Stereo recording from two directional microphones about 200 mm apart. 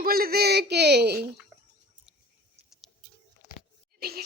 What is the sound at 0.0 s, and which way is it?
Speech, 50° right (ahead or behind).